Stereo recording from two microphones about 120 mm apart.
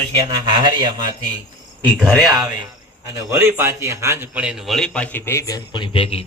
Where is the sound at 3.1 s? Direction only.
20° right (ahead or behind).